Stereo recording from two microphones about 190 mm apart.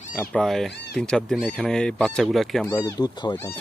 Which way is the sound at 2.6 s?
15° left (ahead or behind).